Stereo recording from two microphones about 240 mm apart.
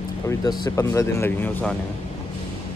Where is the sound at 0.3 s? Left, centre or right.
Centre.